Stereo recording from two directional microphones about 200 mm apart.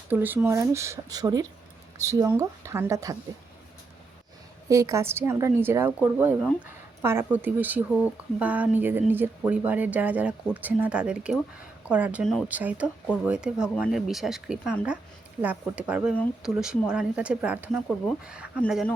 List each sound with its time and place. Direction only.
0.1 s a woman's voice: 10° right (ahead or behind)
4.7 s a woman's voice: 15° right (ahead or behind); by 18.9 s centre (ahead or behind)